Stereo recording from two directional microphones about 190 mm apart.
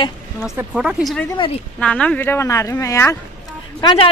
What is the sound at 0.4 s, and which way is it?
Speech, 5° right (ahead or behind).